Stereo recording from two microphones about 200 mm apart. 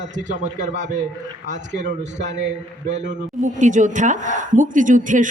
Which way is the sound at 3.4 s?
40° right (ahead or behind).